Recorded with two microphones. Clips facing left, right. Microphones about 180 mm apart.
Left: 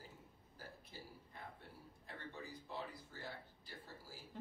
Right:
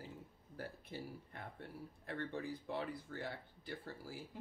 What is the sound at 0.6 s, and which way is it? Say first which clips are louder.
Speech: right 8 dB; 65° right (ahead or behind).